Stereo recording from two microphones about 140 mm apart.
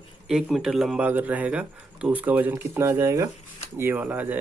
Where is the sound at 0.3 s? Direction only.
5° right (ahead or behind).